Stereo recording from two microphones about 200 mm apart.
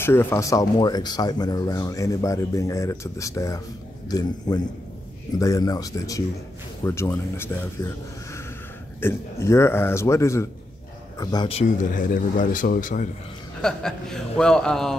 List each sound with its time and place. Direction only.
0.0 s a man's voice: 10° left (ahead or behind)
9.0 s speech: 15° left (ahead or behind); by 13.1 s 40° left (ahead or behind)
13.6 s a man's voice: 5° left (ahead or behind)